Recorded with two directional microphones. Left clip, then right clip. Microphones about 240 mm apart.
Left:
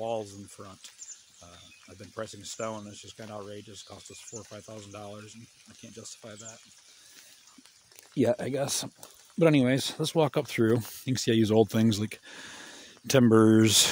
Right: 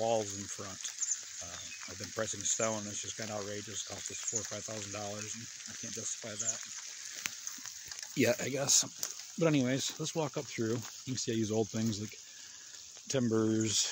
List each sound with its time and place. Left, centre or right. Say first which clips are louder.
0.0 s a sound: right 1 dB; centre
2.2 s speech: right 2 dB; centre
6.2 s speech: right 7 dB; centre
8.2 s speech: left 4 dB; left
9.4 s speech: left 7 dB; left